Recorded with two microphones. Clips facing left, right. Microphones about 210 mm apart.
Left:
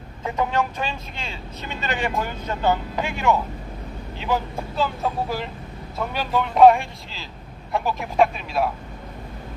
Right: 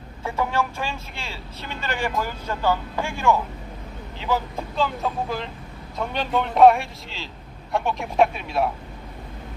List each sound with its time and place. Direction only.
0.3 s speech: 20° left (ahead or behind)
6.0 s speech: 5° left (ahead or behind)